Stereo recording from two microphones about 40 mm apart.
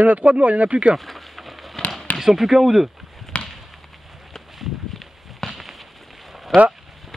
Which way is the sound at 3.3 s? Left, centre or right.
Left.